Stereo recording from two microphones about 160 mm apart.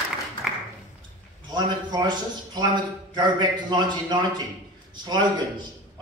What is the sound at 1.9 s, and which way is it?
Speech, 25° right (ahead or behind).